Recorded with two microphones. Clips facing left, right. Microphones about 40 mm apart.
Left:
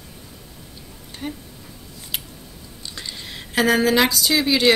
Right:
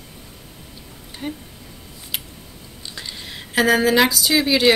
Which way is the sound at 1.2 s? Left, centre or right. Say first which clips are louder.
Right 1 dB; centre.